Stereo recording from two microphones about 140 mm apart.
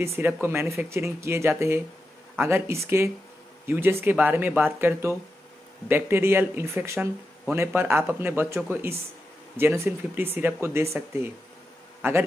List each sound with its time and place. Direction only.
0.0 s speech: 20° right (ahead or behind)